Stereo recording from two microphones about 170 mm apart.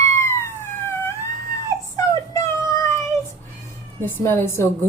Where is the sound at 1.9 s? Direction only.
20° left (ahead or behind).